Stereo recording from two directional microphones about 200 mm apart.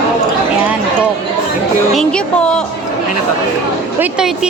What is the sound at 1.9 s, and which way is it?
Music, 5° left (ahead or behind).